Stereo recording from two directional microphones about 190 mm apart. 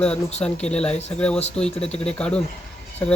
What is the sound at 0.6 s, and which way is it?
Speech, 5° left (ahead or behind).